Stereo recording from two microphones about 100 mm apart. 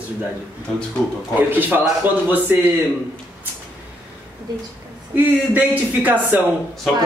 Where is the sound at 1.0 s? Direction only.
5° left (ahead or behind).